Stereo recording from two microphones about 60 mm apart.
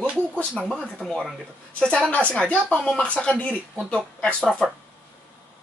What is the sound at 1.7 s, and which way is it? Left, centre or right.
Speech, centre.